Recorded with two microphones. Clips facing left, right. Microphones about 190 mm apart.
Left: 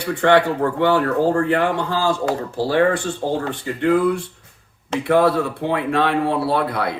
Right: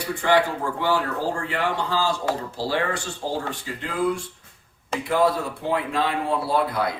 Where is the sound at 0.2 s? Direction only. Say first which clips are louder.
Left 6 dB; 65° left (ahead or behind).